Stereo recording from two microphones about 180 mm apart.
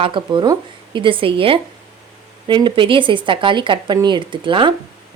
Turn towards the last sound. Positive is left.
turn(degrees=-25)  # may be behind; listen again after turning